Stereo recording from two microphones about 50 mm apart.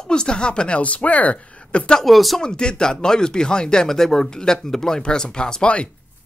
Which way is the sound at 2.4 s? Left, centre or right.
Centre.